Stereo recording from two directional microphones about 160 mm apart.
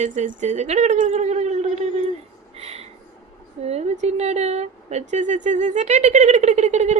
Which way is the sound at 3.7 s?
45° right (ahead or behind).